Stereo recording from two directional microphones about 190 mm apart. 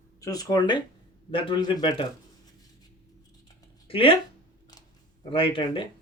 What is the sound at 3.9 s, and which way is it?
Speech, 30° left (ahead or behind).